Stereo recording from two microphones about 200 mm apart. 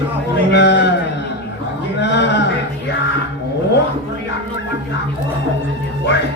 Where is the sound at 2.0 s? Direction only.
60° left (ahead or behind).